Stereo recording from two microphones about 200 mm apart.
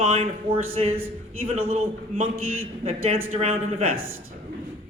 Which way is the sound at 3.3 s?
30° right (ahead or behind).